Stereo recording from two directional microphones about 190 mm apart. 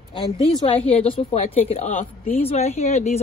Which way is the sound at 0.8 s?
30° left (ahead or behind).